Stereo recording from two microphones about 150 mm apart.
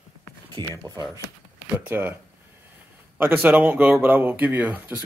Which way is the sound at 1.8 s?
10° right (ahead or behind).